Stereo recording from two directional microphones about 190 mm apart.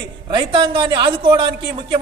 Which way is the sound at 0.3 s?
25° right (ahead or behind).